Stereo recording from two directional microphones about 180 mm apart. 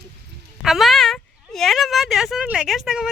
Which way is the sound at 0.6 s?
Centre (ahead or behind).